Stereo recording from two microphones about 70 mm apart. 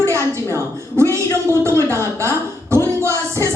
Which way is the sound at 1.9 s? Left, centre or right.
Right.